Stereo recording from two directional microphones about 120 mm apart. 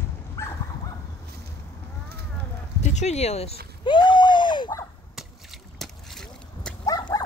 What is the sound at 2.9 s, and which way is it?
Speech, 65° left (ahead or behind).